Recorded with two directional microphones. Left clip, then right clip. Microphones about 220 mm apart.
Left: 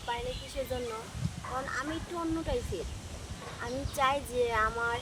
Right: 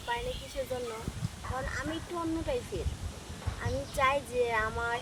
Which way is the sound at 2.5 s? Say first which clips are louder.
Right 2 dB; 5° left (ahead or behind).